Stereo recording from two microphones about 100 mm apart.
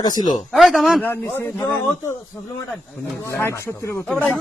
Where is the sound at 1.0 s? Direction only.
25° left (ahead or behind).